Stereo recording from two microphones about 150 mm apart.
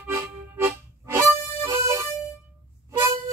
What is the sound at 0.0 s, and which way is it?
Harmonica, 15° right (ahead or behind).